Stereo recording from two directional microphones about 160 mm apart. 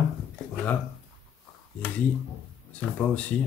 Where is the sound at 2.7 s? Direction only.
10° left (ahead or behind).